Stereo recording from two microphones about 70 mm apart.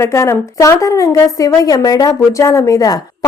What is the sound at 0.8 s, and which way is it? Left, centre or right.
Speech, left.